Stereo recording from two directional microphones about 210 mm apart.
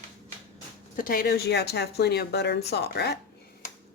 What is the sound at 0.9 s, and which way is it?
Speech, 45° left (ahead or behind).